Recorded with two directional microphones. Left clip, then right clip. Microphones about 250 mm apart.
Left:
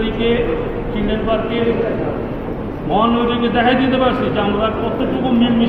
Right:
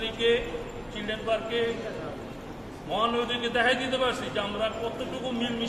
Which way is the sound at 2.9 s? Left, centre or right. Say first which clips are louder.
Left 11 dB; right.